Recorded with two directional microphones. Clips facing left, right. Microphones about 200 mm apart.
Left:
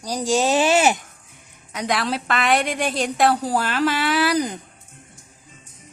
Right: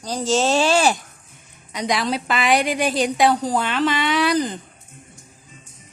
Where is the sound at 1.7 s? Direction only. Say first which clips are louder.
Right 1 dB; 5° left (ahead or behind).